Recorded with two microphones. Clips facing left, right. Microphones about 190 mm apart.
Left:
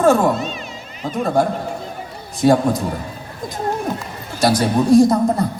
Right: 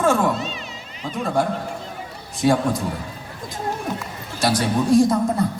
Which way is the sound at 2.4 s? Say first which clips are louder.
Left 4 dB; 40° left (ahead or behind).